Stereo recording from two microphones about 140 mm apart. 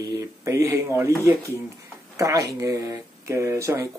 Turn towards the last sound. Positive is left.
turn(degrees=-20)  # may be behind; listen again after turning